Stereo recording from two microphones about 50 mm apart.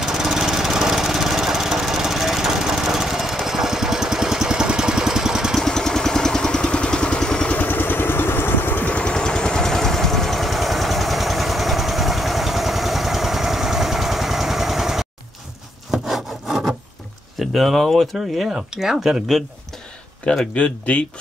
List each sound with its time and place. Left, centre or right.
0.0 s lawn mower: centre
5.6 s vehicle: centre
7.6 s vehicle: left
8.8 s vehicle: left; by 15.0 s centre
15.9 s wood: centre
17.4 s a sound: centre
18.5 s speech: centre
20.5 s speech: left